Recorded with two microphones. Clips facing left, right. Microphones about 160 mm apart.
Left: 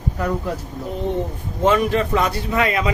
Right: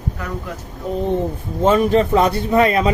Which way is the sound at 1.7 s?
30° right (ahead or behind).